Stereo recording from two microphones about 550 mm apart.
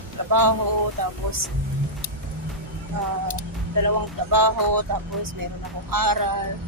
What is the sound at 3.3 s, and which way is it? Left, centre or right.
Speech, right.